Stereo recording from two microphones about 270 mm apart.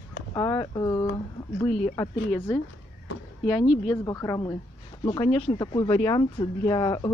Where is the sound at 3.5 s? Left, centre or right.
Centre.